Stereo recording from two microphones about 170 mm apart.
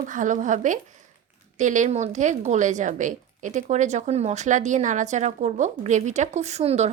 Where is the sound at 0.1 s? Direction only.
50° right (ahead or behind).